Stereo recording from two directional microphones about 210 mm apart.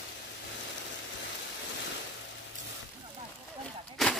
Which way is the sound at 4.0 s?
Centre (ahead or behind).